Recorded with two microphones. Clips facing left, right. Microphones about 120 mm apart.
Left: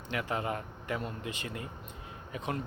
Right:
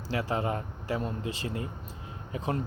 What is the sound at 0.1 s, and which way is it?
Speech, 30° right (ahead or behind).